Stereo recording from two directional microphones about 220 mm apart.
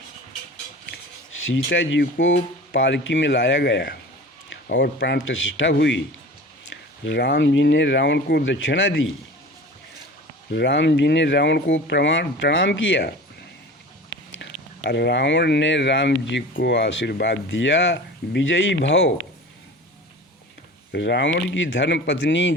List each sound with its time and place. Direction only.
1.5 s speech: 60° left (ahead or behind)
7.0 s speech: 55° left (ahead or behind)
10.5 s speech: 50° left (ahead or behind)
14.3 s speech: 50° left (ahead or behind)
20.9 s speech: 55° left (ahead or behind)